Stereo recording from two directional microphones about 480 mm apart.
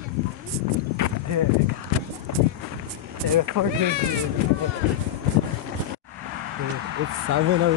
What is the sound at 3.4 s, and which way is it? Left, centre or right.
Speech, right.